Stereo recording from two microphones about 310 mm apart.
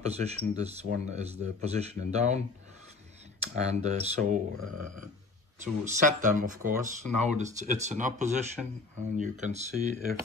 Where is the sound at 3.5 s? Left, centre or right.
Right.